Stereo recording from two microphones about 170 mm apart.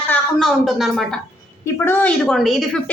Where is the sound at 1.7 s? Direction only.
10° left (ahead or behind).